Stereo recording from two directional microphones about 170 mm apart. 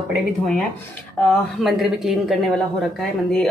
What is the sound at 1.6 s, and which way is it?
Speech, centre (ahead or behind).